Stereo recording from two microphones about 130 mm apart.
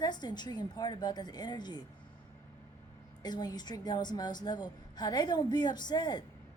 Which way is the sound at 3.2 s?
30° left (ahead or behind).